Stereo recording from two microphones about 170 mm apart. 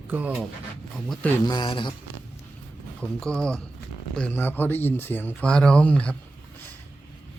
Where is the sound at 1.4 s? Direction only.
25° left (ahead or behind).